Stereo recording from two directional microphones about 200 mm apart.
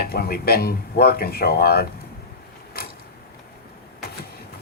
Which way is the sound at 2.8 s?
50° left (ahead or behind).